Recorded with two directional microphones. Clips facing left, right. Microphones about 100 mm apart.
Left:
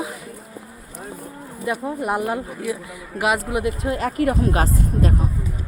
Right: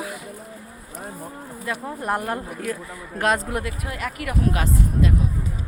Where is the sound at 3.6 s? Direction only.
25° left (ahead or behind).